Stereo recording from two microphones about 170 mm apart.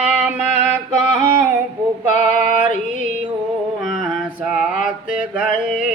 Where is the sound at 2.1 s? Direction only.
50° left (ahead or behind).